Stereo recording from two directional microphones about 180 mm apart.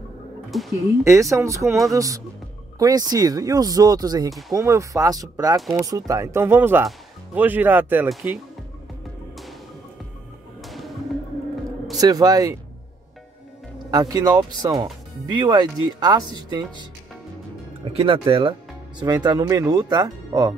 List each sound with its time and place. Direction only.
0.5 s speech: centre (ahead or behind)
1.0 s speech: 15° right (ahead or behind)
4.3 s speech: centre (ahead or behind)
4.6 s speech: 15° right (ahead or behind)
10.6 s a sound: centre (ahead or behind)
12.0 s speech: 20° right (ahead or behind)
13.8 s speech: 20° right (ahead or behind)
17.8 s speech: 30° right (ahead or behind)